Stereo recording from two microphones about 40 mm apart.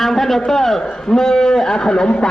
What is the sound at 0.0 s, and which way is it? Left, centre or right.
A man's voice, centre.